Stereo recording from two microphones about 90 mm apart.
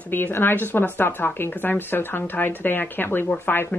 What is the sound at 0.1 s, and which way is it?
Speech, 20° left (ahead or behind).